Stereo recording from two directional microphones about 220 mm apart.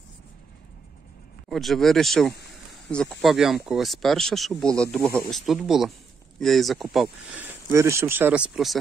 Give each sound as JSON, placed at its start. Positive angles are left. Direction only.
{"t": 1.5, "sound": "speech", "side_deg": 0}
{"t": 7.7, "sound": "speech", "side_deg": -15}